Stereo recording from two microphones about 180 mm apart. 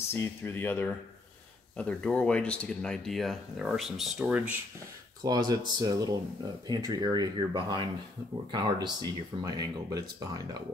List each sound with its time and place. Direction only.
0.1 s speech: 15° left (ahead or behind); by 4.6 s 10° right (ahead or behind)
5.2 s speech: 20° right (ahead or behind)